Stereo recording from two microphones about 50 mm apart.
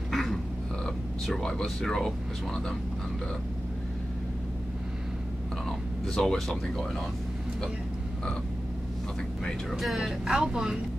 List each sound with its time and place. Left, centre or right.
0.1 s dog: centre
0.8 s speech: centre
5.7 s speech: centre
9.4 s speech: centre
9.8 s speech: centre